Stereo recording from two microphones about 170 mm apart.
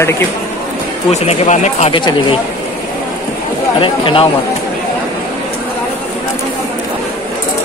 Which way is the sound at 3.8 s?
30° left (ahead or behind).